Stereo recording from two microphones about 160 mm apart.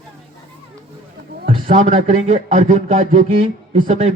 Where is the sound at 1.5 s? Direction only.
35° right (ahead or behind).